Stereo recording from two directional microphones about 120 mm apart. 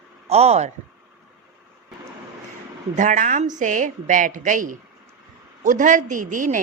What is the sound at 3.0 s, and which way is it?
A woman's voice, 90° right.